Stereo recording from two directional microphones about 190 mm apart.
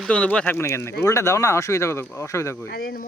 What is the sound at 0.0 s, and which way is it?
Speech, 5° left (ahead or behind).